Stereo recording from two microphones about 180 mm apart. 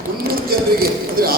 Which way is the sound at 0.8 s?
55° right (ahead or behind).